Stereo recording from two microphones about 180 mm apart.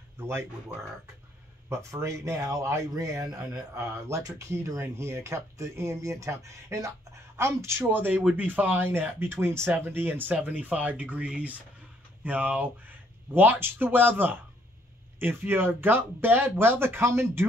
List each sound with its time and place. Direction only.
0.2 s speech: 15° right (ahead or behind)
1.7 s speech: 15° right (ahead or behind)